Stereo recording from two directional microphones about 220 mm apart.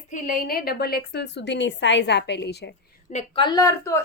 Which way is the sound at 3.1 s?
25° left (ahead or behind).